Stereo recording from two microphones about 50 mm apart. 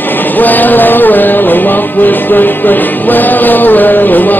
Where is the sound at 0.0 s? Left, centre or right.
Left.